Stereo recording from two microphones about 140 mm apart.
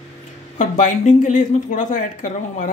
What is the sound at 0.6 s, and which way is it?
Speech, 60° left (ahead or behind).